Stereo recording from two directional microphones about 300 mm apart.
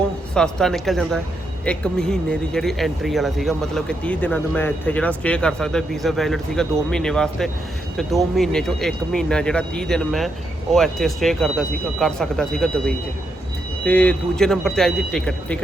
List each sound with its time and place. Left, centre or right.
0.3 s speech: centre